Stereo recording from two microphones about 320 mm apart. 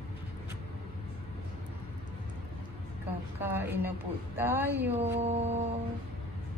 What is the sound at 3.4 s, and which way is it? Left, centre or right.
A woman's voice, centre.